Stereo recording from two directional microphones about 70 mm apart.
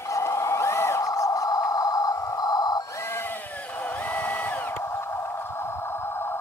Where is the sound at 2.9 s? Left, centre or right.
Left.